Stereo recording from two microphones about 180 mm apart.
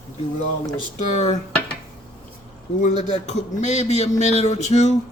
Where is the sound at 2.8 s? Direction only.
40° left (ahead or behind).